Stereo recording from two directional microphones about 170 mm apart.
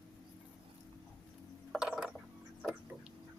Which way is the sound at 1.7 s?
Centre (ahead or behind).